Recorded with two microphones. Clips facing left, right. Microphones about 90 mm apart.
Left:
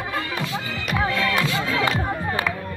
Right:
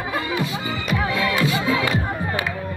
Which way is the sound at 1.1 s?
5° right (ahead or behind).